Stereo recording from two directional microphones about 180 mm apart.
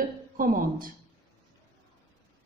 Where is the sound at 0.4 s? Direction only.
50° right (ahead or behind).